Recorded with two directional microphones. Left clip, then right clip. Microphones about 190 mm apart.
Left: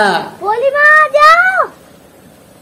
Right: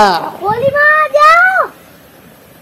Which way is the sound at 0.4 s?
15° left (ahead or behind).